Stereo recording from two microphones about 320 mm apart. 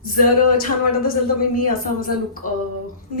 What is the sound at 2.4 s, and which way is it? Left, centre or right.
Speech, left.